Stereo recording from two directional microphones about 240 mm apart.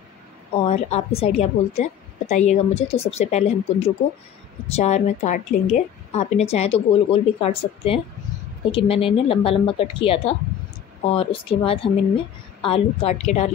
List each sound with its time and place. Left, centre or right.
0.7 s a woman's voice: left